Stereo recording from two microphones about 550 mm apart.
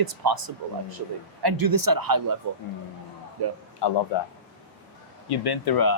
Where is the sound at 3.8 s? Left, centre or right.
Left.